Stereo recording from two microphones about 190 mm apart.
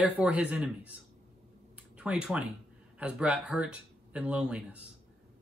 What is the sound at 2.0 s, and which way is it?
Speech, 5° right (ahead or behind).